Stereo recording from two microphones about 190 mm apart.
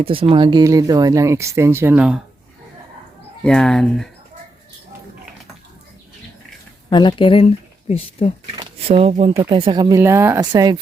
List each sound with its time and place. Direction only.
0.0 s speech: 30° right (ahead or behind); by 2.1 s 5° right (ahead or behind)
3.4 s speech: 5° left (ahead or behind)
6.9 s speech: 25° left (ahead or behind)
8.5 s speech: 30° right (ahead or behind)